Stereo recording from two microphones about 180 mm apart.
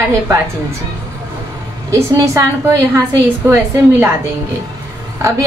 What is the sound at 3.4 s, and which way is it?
Speech, 15° right (ahead or behind).